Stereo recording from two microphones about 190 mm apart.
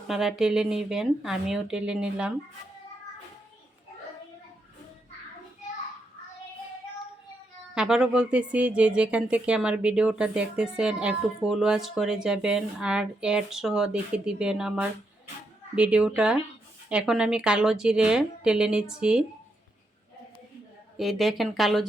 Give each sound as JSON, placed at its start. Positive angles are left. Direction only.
{"t": 0.1, "sound": "speech", "side_deg": 0}
{"t": 7.8, "sound": "speech", "side_deg": -5}
{"t": 20.9, "sound": "speech", "side_deg": 0}